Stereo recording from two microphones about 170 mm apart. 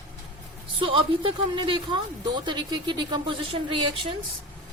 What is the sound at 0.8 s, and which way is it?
Speech, 30° right (ahead or behind).